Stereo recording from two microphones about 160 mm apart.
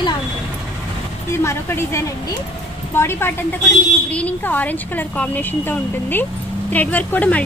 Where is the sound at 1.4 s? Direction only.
15° left (ahead or behind).